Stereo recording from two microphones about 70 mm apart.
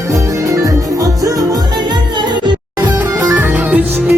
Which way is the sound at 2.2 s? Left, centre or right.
Right.